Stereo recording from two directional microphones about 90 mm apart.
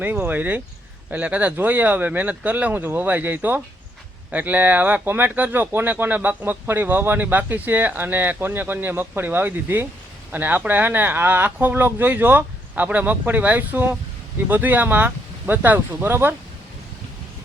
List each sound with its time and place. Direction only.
0.0 s speech: 20° right (ahead or behind)